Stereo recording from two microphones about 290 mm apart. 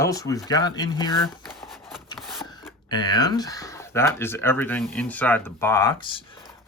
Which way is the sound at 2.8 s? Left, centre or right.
Centre.